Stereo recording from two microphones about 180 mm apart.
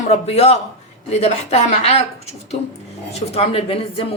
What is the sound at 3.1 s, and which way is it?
A man's voice, 35° left (ahead or behind).